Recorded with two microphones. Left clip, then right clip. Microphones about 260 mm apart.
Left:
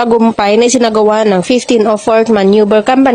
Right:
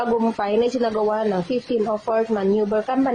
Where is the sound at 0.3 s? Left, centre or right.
Left.